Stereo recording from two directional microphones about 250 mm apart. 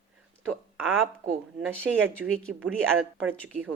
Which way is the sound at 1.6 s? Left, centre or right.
Centre.